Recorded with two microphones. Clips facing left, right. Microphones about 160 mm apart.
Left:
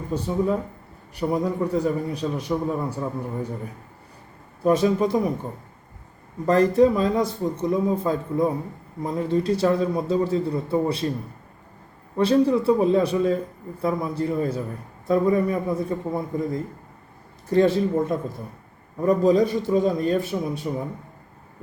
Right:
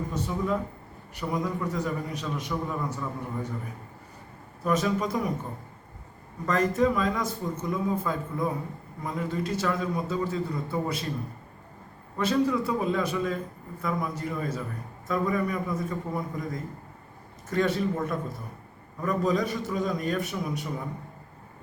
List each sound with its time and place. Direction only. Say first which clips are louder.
0.1 s a man's voice: left 8 dB; 30° left (ahead or behind)
4.6 s a man's voice: left 7 dB; 30° left (ahead or behind)
6.4 s a man's voice: left 7 dB; 35° left (ahead or behind)
12.1 s a man's voice: left 6 dB; 30° left (ahead or behind)